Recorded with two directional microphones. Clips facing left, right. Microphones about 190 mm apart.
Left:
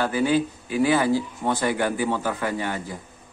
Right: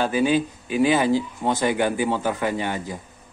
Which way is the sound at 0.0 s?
15° right (ahead or behind).